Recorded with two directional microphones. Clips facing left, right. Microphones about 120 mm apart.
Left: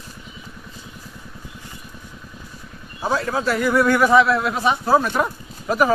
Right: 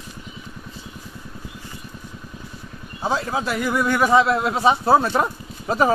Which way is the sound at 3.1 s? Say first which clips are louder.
Left 3 dB; 20° right (ahead or behind).